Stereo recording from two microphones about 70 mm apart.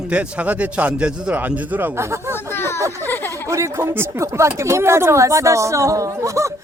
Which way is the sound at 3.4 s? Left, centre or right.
Right.